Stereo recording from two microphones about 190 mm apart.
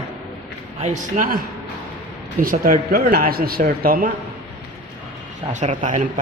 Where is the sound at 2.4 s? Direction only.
50° right (ahead or behind).